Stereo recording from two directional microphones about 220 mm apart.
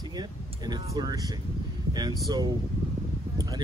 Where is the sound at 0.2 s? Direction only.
20° right (ahead or behind).